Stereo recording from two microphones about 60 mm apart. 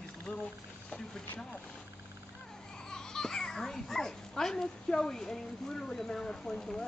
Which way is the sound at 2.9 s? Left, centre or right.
Centre.